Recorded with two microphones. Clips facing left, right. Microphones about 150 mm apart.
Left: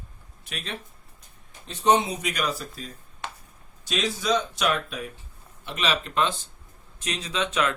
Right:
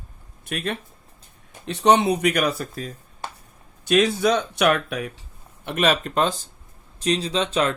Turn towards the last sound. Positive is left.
turn(degrees=-35)  # may be behind; listen again after turning